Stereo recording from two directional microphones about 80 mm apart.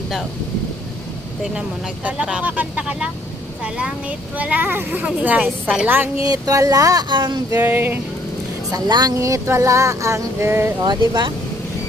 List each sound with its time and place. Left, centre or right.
2.0 s a woman's voice: centre
6.2 s speech: right
7.1 s speech: right
7.5 s a woman's voice: right
8.7 s speech: right
9.1 s a sound: right
10.8 s speech: right